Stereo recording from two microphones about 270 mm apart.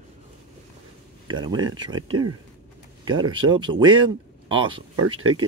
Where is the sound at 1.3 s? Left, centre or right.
Centre.